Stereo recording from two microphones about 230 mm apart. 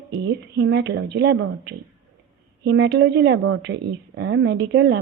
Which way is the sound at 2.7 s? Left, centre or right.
Right.